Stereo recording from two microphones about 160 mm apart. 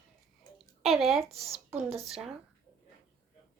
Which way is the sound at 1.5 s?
40° right (ahead or behind).